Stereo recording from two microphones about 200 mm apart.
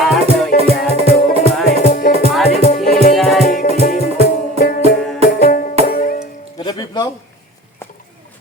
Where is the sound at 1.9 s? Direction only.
45° left (ahead or behind).